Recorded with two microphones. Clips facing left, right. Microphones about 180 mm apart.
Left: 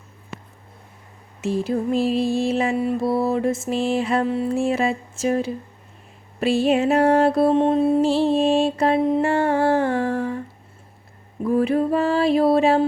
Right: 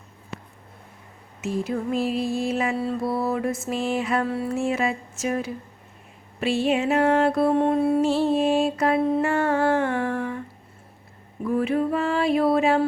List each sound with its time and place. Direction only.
1.4 s music: 30° left (ahead or behind)
2.7 s music: 15° left (ahead or behind)
4.5 s a sound: 30° left (ahead or behind)
6.4 s music: 40° left (ahead or behind)
9.0 s mantra: 15° left (ahead or behind)
9.2 s music: 30° left (ahead or behind)
11.4 s a sound: 35° left (ahead or behind)